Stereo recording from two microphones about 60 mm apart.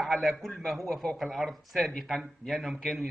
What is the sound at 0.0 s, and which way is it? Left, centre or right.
Speech, centre.